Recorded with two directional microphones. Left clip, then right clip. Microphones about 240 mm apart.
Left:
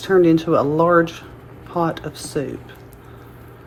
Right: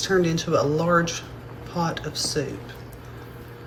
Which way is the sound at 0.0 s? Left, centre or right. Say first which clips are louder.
Left 8 dB; left.